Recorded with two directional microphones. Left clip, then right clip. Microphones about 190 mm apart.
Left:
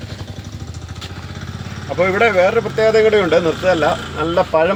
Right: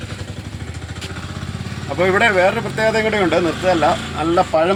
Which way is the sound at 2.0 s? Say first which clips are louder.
Left 1 dB; 55° left (ahead or behind).